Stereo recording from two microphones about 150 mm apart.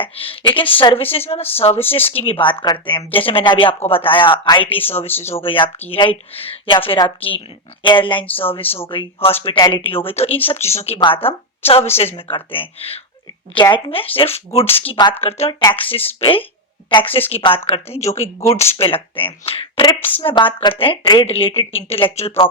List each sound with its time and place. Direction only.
0.0 s speech: 35° left (ahead or behind)
5.0 s speech: 15° left (ahead or behind)
5.4 s a woman's voice: 35° left (ahead or behind)
18.3 s speech: 20° left (ahead or behind)
18.6 s speech: 40° left (ahead or behind)